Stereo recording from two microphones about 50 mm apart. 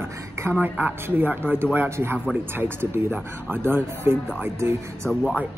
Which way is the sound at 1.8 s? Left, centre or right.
Right.